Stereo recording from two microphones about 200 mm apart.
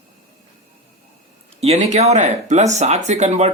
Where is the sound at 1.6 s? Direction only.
35° right (ahead or behind).